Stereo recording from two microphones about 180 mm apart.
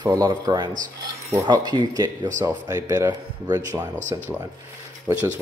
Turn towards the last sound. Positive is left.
turn(degrees=-15)  # may be behind; listen again after turning